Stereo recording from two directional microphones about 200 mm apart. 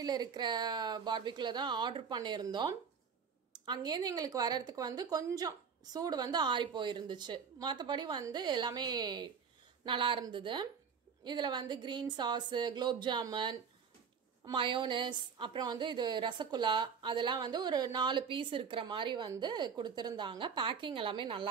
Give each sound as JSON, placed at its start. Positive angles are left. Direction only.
{"t": 0.0, "sound": "a woman's voice", "side_deg": -20}